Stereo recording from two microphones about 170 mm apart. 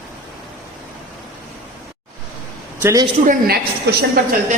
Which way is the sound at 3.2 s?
65° right (ahead or behind).